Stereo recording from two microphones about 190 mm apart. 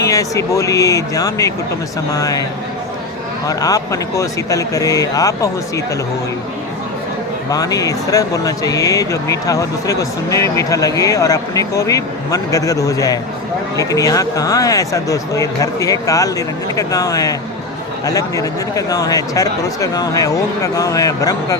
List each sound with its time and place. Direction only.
0.0 s speech: 15° left (ahead or behind)
3.4 s speech: 20° left (ahead or behind)
7.5 s speech: 20° left (ahead or behind)